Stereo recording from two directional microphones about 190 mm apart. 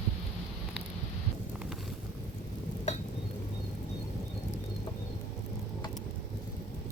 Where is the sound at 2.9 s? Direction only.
35° left (ahead or behind).